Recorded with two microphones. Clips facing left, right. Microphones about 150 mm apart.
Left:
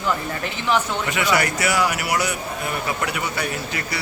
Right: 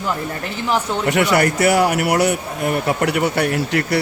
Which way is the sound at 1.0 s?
60° right (ahead or behind).